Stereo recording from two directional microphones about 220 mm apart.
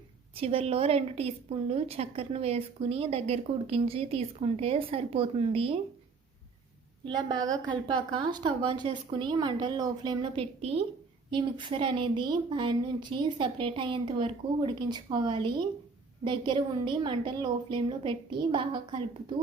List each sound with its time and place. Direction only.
0.3 s a woman's voice: 25° right (ahead or behind)
7.0 s a woman's voice: 20° right (ahead or behind)